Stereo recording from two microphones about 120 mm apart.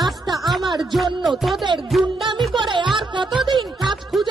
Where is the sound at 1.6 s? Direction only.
40° right (ahead or behind).